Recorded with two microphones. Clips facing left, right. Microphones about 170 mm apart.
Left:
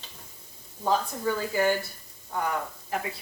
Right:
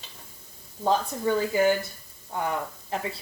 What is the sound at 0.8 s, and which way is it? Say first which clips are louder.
Speech: right 2 dB; 20° right (ahead or behind).